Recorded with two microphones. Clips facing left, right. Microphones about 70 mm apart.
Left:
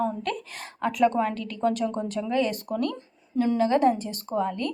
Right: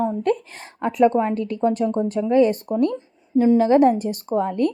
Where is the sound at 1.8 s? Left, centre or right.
Centre.